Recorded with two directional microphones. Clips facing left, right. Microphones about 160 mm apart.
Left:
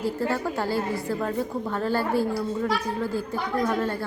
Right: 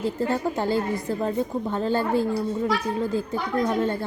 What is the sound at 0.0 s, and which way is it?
A woman's voice, 20° right (ahead or behind).